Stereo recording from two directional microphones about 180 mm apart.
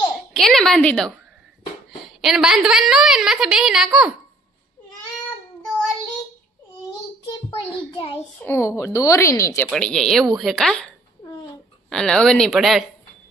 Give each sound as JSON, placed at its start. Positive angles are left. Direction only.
{"t": 0.3, "sound": "a woman's voice", "side_deg": 0}
{"t": 2.2, "sound": "a woman's voice", "side_deg": -5}
{"t": 7.3, "sound": "a child's voice", "side_deg": 25}
{"t": 8.4, "sound": "speech", "side_deg": 15}
{"t": 9.7, "sound": "a woman's voice", "side_deg": 5}
{"t": 11.9, "sound": "a woman's voice", "side_deg": 5}